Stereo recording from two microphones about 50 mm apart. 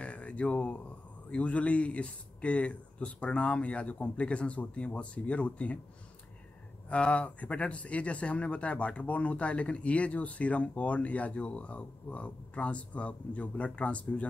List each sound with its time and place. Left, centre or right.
0.0 s a sound: left
1.3 s speech: left
6.9 s speech: left